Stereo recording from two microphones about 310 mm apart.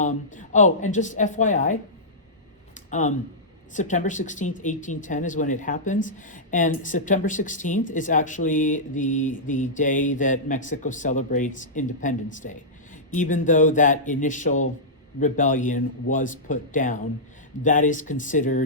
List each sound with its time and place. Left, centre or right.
0.0 s speech: left
2.9 s speech: left